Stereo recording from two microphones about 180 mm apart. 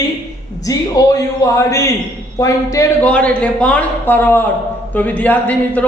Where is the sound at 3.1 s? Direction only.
5° left (ahead or behind).